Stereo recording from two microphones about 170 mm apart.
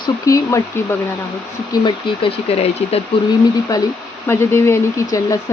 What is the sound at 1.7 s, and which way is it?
Speech, 25° left (ahead or behind).